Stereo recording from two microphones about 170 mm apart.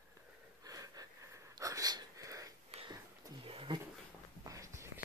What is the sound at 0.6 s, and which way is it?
Wheeze, 20° right (ahead or behind).